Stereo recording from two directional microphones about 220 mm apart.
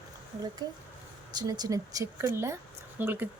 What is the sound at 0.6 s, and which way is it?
Speech, 15° right (ahead or behind).